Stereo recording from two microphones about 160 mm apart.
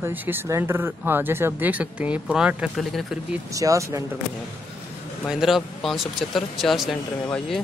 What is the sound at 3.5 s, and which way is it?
Speech, 20° right (ahead or behind).